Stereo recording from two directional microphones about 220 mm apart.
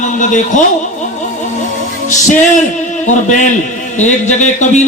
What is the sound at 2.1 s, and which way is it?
A man's voice, 35° left (ahead or behind).